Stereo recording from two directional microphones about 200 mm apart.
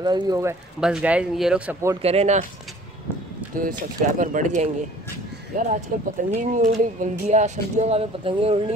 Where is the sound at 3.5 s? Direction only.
45° right (ahead or behind).